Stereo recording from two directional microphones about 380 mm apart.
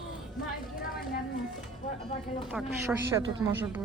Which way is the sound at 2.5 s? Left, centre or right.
Centre.